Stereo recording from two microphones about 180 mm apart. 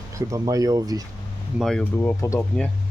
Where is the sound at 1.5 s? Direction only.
5° left (ahead or behind).